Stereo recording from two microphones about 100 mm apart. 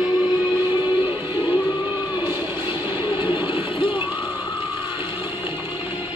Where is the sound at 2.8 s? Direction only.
20° right (ahead or behind).